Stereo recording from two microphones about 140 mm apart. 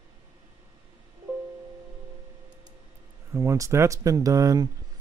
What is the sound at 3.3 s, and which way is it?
Speech, 20° right (ahead or behind).